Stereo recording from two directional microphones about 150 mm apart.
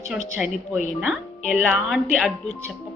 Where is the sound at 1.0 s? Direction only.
10° right (ahead or behind).